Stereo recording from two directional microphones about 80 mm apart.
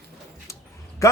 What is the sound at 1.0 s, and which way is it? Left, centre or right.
Speech, left.